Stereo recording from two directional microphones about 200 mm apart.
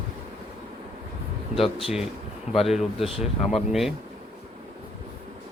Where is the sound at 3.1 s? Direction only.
30° left (ahead or behind).